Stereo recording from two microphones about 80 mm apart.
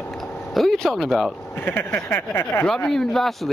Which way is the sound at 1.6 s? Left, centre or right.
Left.